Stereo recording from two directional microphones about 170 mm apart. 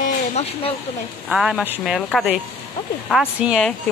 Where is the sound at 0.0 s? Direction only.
35° left (ahead or behind).